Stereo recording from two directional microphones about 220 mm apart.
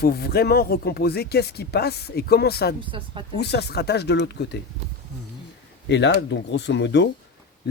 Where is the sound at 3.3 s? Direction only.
50° left (ahead or behind).